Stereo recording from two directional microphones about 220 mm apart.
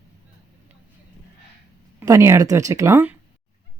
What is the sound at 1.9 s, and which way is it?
Speech, 15° right (ahead or behind).